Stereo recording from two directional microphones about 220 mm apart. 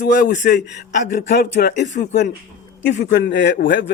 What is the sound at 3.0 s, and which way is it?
Speech, 45° left (ahead or behind).